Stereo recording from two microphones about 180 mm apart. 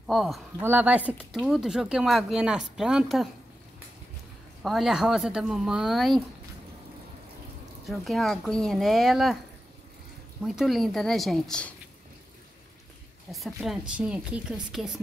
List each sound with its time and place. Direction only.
0.0 s speech: centre (ahead or behind)
4.6 s speech: centre (ahead or behind)
7.8 s speech: centre (ahead or behind)
10.4 s speech: centre (ahead or behind)
13.3 s speech: centre (ahead or behind)